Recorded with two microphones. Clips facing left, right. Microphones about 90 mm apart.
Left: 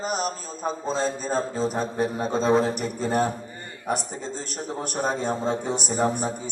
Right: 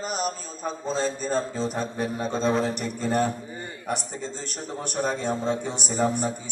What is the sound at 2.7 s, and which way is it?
A man's voice, 5° left (ahead or behind).